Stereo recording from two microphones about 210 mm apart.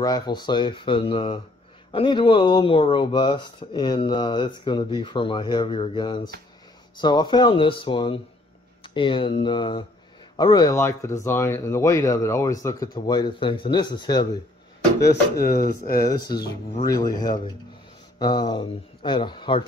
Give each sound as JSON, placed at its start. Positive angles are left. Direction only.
{"t": 0.0, "sound": "speech", "side_deg": 20}
{"t": 15.0, "sound": "speech", "side_deg": 50}
{"t": 16.1, "sound": "speech", "side_deg": 20}